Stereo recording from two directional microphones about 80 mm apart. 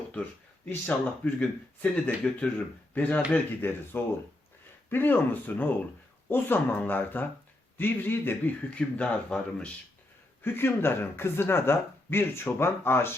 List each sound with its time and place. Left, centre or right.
0.7 s speech: centre
8.7 s speech: centre
10.4 s speech: left